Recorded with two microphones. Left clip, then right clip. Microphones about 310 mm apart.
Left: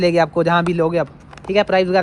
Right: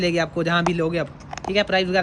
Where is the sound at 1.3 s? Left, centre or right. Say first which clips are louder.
Right 1 dB; centre.